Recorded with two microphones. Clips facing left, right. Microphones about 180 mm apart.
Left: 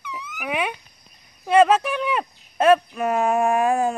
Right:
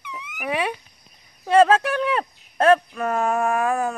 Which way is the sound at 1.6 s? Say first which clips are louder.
Even; 5° left (ahead or behind).